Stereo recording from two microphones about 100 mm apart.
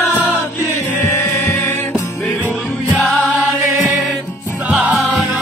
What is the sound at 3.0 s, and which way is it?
Music, 5° left (ahead or behind).